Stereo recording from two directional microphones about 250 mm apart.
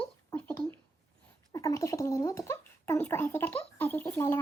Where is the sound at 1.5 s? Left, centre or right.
Centre.